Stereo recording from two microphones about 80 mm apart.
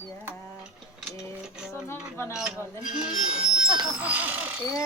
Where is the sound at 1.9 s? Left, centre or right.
Left.